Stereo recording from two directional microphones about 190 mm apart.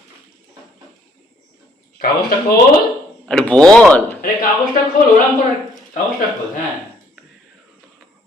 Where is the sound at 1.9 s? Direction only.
50° left (ahead or behind).